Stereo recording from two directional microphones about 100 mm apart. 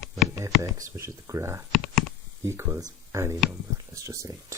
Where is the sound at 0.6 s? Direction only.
30° right (ahead or behind).